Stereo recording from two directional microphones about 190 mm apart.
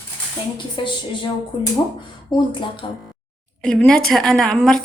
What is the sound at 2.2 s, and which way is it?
Speech, 25° left (ahead or behind).